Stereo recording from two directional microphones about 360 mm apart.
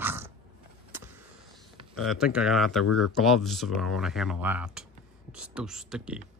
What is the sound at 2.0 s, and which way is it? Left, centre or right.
Speech, centre.